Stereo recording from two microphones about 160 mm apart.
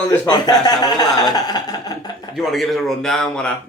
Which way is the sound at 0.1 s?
25° left (ahead or behind).